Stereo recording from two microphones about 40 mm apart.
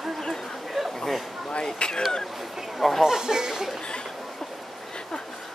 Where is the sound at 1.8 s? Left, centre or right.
Left.